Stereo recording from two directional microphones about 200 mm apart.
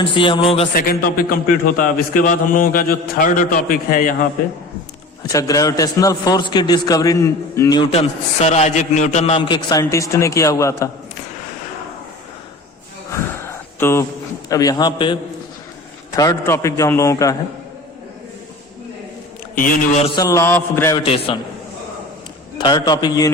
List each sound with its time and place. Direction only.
0.0 s a man's voice: 25° left (ahead or behind)
0.8 s a man's voice: 45° left (ahead or behind)
5.3 s a man's voice: 15° left (ahead or behind)
13.1 s a sound: 15° left (ahead or behind)
14.5 s a man's voice: 20° left (ahead or behind)
19.5 s a man's voice: 45° left (ahead or behind)
20.1 s a man's voice: 15° left (ahead or behind)
21.0 s a man's voice: 30° left (ahead or behind)
22.5 s a man's voice: 20° left (ahead or behind)